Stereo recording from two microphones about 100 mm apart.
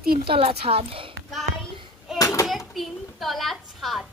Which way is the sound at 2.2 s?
35° left (ahead or behind).